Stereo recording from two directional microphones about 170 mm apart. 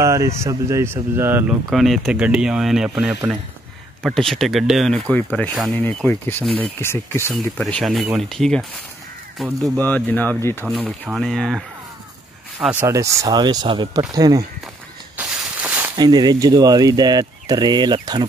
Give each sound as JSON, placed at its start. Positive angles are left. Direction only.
{"t": 0.0, "sound": "speech", "side_deg": -15}
{"t": 1.7, "sound": "speech", "side_deg": 0}
{"t": 7.3, "sound": "speech", "side_deg": 5}
{"t": 12.7, "sound": "speech", "side_deg": -15}
{"t": 15.1, "sound": "a sound", "side_deg": -5}
{"t": 16.0, "sound": "speech", "side_deg": -25}